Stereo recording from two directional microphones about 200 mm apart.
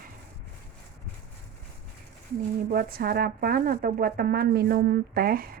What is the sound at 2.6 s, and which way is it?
Speech, 45° right (ahead or behind).